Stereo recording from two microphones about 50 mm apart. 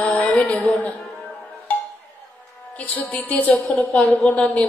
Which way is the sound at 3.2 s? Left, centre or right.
Left.